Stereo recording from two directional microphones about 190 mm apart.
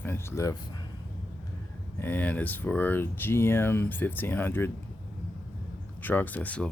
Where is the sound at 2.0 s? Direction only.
10° left (ahead or behind).